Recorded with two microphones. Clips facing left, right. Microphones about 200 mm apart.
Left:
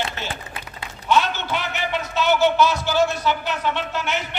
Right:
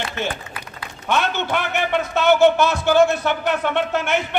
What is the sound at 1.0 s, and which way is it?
A man's voice, 55° right (ahead or behind).